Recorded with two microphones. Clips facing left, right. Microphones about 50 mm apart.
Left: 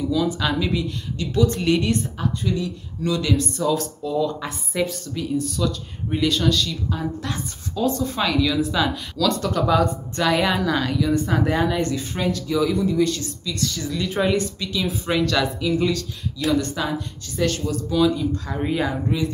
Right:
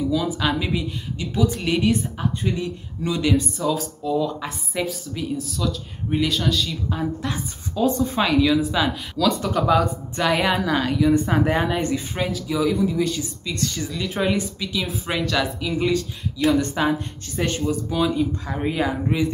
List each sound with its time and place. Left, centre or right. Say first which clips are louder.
0.1 s speech: even; centre
2.5 s speech: left 1 dB; right
3.5 s speech: left 2 dB; centre
13.5 s speech: even; right
13.8 s speech: left 2 dB; centre
16.5 s speech: right 2 dB; right; by 18.9 s centre